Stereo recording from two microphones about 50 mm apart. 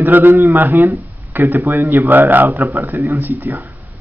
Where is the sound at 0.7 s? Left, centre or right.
Right.